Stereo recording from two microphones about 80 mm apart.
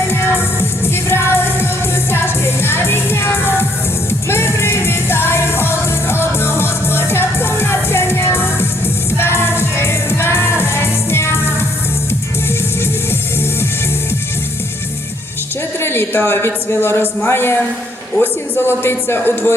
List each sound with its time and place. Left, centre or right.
1.1 s music: left
15.8 s a man's voice: left